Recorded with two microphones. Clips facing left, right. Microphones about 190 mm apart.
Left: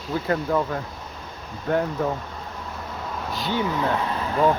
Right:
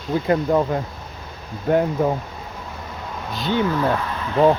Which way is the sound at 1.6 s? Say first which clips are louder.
Right 5 dB; 20° right (ahead or behind).